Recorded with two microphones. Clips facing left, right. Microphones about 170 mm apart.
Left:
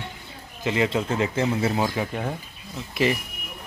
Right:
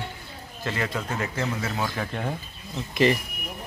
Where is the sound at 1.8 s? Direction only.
10° left (ahead or behind).